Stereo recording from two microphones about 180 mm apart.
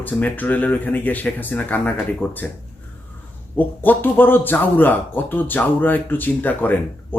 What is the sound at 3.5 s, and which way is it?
Speech, 10° left (ahead or behind).